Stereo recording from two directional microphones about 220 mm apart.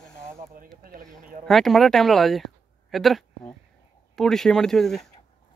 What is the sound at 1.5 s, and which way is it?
Speech, centre (ahead or behind).